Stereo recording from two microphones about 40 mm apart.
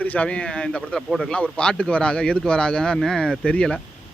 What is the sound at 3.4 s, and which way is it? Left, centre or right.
Speech, left.